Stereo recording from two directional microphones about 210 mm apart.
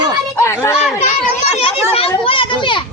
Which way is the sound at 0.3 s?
10° left (ahead or behind).